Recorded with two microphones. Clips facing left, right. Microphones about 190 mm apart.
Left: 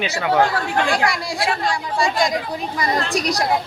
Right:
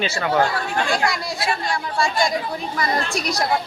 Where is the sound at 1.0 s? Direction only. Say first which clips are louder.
Left 2 dB; 90° left.